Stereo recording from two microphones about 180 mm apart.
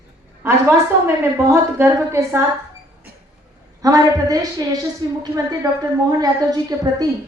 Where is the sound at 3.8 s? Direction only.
20° right (ahead or behind).